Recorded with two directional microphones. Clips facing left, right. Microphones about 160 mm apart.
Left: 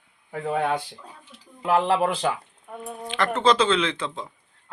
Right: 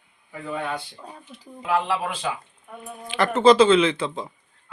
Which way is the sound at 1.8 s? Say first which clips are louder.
Left 5 dB; 45° left (ahead or behind).